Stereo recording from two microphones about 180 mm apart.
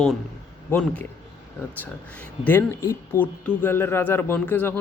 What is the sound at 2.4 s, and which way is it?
Speech, 10° left (ahead or behind).